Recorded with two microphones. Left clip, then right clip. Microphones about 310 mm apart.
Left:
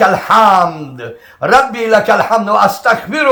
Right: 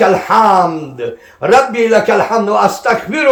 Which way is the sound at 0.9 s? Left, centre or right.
Centre.